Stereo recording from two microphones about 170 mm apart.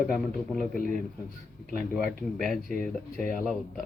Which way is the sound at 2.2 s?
5° left (ahead or behind).